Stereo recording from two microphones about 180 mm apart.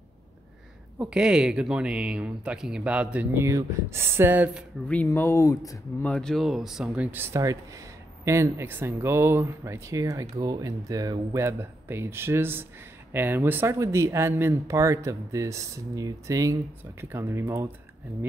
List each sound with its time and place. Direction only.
0.9 s speech: 5° right (ahead or behind)
4.8 s speech: 10° left (ahead or behind)
6.0 s speech: 5° left (ahead or behind); by 17.6 s 15° right (ahead or behind)